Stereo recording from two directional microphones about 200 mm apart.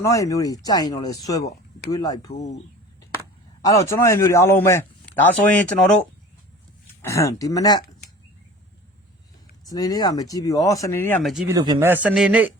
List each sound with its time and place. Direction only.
0.0 s speech: 15° left (ahead or behind)
3.6 s speech: 15° left (ahead or behind)
7.0 s speech: 15° left (ahead or behind)
9.6 s speech: 20° left (ahead or behind); by 11.4 s centre (ahead or behind)
11.4 s speech: 20° right (ahead or behind)
12.0 s speech: 5° right (ahead or behind)